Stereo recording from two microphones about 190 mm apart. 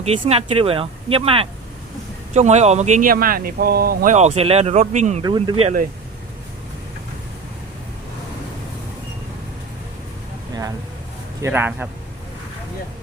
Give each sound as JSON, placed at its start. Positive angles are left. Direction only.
{"t": 0.0, "sound": "speech", "side_deg": -30}
{"t": 5.2, "sound": "speech", "side_deg": -25}
{"t": 11.4, "sound": "speech", "side_deg": -10}